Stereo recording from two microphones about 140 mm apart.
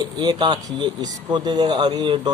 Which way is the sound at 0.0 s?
30° right (ahead or behind).